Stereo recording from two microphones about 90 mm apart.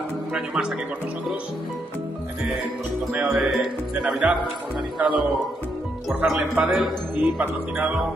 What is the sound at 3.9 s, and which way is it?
Speech, 5° right (ahead or behind).